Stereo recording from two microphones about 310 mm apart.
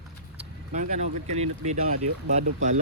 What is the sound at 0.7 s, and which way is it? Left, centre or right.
Speech, right.